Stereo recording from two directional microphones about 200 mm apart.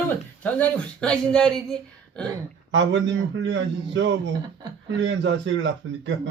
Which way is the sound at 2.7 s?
65° right (ahead or behind).